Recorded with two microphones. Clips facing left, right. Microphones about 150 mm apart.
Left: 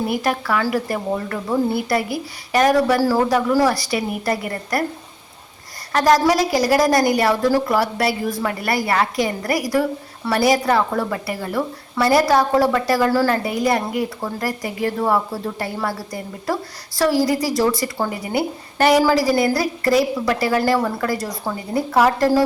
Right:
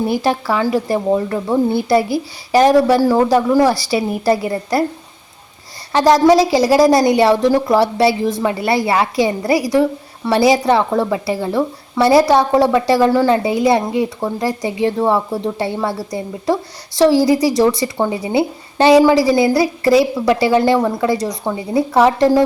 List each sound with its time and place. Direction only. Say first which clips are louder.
0.1 s a woman's voice: right 4 dB; 30° right (ahead or behind)
5.9 s a woman's voice: right 5 dB; 25° right (ahead or behind)